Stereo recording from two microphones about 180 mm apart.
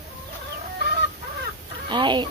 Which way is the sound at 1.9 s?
25° right (ahead or behind).